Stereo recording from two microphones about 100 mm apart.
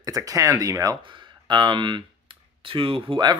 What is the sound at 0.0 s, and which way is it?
Speech, 35° right (ahead or behind).